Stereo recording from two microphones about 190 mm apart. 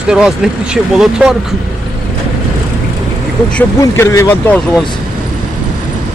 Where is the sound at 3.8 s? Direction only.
15° left (ahead or behind).